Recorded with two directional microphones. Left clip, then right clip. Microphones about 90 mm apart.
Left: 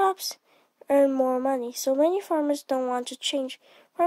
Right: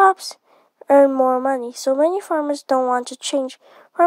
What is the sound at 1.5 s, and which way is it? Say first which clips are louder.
Speech: right 6 dB; 60° right (ahead or behind).